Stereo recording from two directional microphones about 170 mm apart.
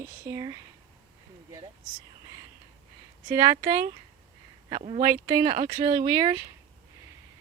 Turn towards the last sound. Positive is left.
turn(degrees=-25)  # may be behind; listen again after turning